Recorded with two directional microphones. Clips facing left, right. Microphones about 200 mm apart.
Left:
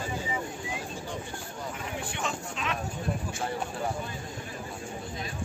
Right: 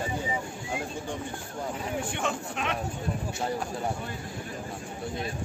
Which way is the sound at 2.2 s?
60° right (ahead or behind).